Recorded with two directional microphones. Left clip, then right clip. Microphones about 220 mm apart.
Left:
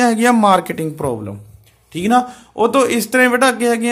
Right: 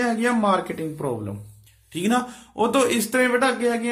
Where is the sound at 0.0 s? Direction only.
40° left (ahead or behind).